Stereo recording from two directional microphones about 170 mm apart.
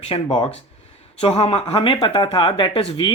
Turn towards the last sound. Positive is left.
turn(degrees=30)  # may be behind; listen again after turning